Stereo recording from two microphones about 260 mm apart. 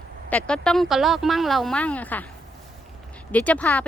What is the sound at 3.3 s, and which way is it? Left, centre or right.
Speech, centre.